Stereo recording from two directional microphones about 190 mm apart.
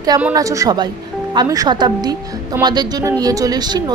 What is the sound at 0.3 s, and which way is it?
A woman's voice, 15° right (ahead or behind).